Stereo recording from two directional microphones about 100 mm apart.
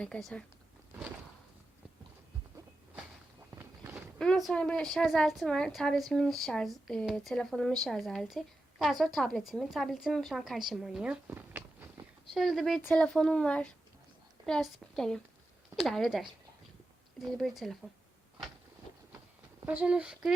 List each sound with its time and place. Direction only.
0.0 s speech: 5° left (ahead or behind)
3.5 s a sound: 25° right (ahead or behind)
4.2 s a woman's voice: 5° left (ahead or behind)
11.3 s a sound: 20° right (ahead or behind)
12.3 s a woman's voice: centre (ahead or behind)
17.3 s a woman's voice: centre (ahead or behind)
19.6 s speech: 15° right (ahead or behind)